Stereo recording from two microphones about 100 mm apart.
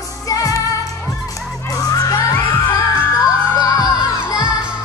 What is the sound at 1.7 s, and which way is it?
Children shouting, 35° left (ahead or behind).